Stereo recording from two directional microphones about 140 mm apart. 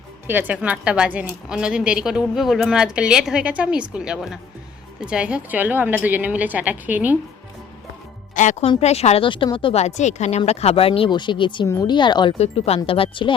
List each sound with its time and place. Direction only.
0.3 s a woman's voice: 10° right (ahead or behind)
8.4 s speech: 60° left (ahead or behind)
8.8 s speech: 50° left (ahead or behind)
9.8 s speech: 55° left (ahead or behind); by 12.3 s 35° left (ahead or behind)
12.4 s speech: 45° left (ahead or behind)